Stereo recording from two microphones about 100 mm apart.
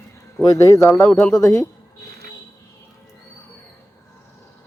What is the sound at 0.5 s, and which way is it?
Speech, 35° left (ahead or behind).